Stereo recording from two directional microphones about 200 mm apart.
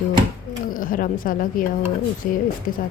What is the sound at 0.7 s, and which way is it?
A woman's voice, 45° left (ahead or behind).